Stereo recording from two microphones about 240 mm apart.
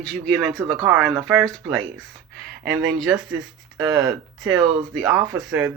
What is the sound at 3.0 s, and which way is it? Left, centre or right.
Speech, centre.